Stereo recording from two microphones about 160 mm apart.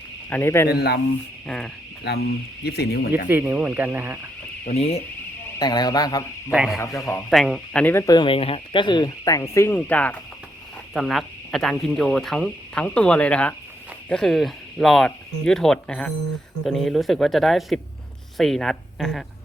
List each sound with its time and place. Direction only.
0.3 s speech: 15° left (ahead or behind)
0.7 s speech: 85° left
1.5 s speech: 5° left (ahead or behind)
2.0 s speech: 85° left
3.2 s speech: 10° right (ahead or behind)
4.6 s speech: 40° left (ahead or behind)
5.5 s a man's voice: 25° left (ahead or behind)
6.5 s speech: 5° right (ahead or behind)
6.7 s speech: 15° left (ahead or behind)
7.1 s speech: 5° left (ahead or behind)